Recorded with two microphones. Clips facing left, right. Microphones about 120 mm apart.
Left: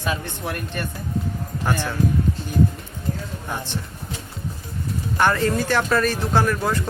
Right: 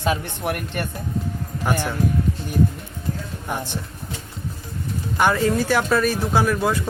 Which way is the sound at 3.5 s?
15° right (ahead or behind).